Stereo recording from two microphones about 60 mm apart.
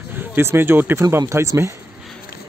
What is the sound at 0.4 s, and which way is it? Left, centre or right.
Speech, right.